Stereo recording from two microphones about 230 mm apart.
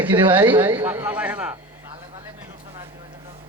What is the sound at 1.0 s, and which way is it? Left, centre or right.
Speech, centre.